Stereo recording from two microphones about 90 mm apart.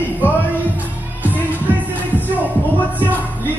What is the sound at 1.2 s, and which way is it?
Music, 20° right (ahead or behind).